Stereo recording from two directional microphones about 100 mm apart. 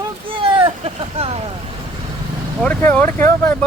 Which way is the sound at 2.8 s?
20° left (ahead or behind).